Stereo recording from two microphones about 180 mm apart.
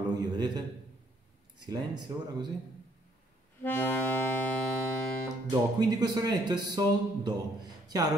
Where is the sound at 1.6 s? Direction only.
25° right (ahead or behind).